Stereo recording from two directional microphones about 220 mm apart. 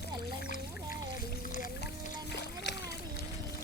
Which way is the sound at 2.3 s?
50° left (ahead or behind).